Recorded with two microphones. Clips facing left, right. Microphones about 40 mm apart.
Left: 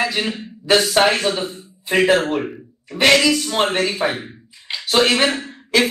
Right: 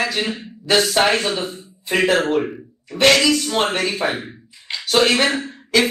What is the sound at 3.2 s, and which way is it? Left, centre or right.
Speech, centre.